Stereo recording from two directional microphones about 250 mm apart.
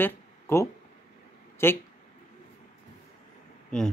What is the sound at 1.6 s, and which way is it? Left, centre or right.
Speech, centre.